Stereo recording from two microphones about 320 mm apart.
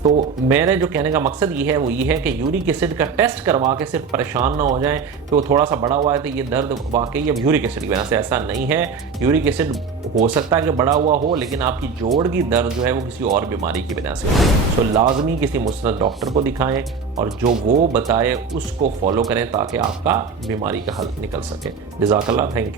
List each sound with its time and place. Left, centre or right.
0.4 s speech: centre
11.0 s speech: right
11.3 s speech: centre
14.9 s speech: centre
17.4 s speech: right
17.9 s speech: centre
18.8 s speech: centre
22.1 s speech: centre